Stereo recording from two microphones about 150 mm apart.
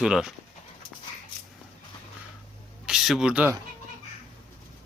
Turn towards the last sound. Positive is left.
turn(degrees=-5)  # may be behind; listen again after turning